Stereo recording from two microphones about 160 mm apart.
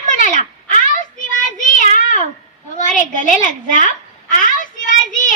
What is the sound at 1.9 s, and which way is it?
Cat, 50° left (ahead or behind).